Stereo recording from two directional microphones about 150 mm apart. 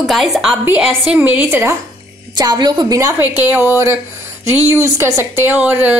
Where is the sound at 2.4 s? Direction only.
30° right (ahead or behind).